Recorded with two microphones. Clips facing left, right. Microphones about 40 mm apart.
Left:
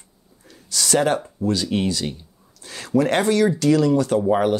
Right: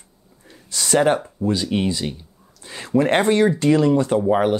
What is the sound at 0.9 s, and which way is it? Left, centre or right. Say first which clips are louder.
Speech: right 3 dB; centre.